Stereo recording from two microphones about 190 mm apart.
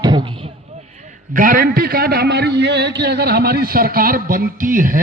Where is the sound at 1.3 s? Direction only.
45° right (ahead or behind).